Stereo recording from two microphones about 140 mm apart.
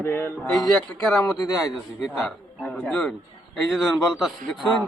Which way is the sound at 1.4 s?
25° left (ahead or behind).